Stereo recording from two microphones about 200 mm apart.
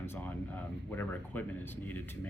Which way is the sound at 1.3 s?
10° left (ahead or behind).